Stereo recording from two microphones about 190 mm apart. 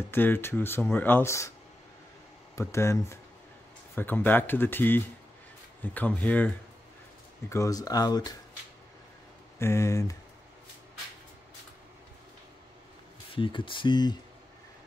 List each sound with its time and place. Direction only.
0.1 s speech: 10° left (ahead or behind)
2.5 s speech: 15° left (ahead or behind)
9.6 s speech: 15° left (ahead or behind)
13.3 s speech: 25° left (ahead or behind)